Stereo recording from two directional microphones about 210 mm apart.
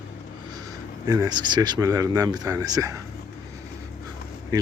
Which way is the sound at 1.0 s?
15° right (ahead or behind).